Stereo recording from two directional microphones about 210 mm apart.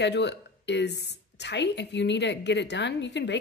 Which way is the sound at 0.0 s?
55° left (ahead or behind).